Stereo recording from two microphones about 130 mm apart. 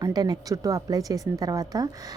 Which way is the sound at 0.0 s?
30° right (ahead or behind).